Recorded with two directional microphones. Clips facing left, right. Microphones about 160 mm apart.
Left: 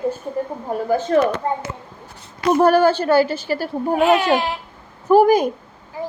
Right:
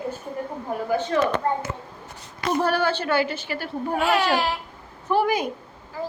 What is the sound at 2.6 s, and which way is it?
A woman's voice, 45° left (ahead or behind).